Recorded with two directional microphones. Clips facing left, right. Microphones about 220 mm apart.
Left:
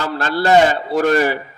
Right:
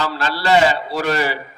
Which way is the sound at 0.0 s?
50° left (ahead or behind).